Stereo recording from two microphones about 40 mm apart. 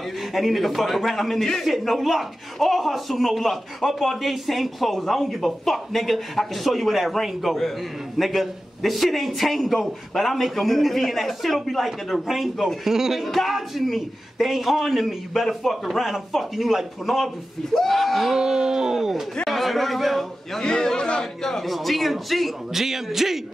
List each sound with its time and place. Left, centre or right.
0.3 s speech: centre
18.4 s speech: centre
19.4 s a man's voice: centre
20.6 s speech: centre